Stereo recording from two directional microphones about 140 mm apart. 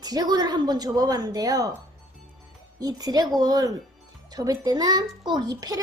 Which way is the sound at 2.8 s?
25° right (ahead or behind).